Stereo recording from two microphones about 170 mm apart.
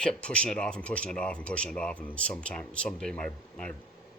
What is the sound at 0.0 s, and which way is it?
Speech, 5° left (ahead or behind).